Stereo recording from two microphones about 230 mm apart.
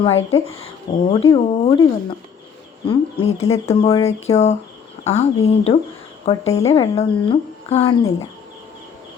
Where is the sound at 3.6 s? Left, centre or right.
Centre.